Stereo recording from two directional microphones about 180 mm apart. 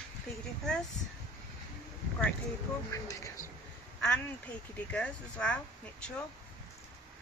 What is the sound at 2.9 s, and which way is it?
Speech, 15° left (ahead or behind).